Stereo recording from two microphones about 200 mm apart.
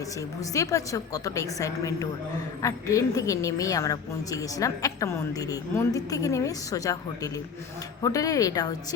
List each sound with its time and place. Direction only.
0.5 s a woman's voice: 15° left (ahead or behind)